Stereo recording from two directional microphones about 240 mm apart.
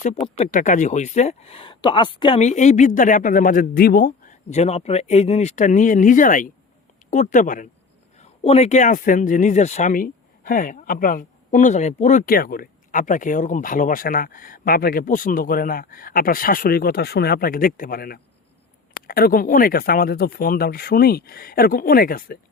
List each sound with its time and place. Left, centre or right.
0.3 s speech: left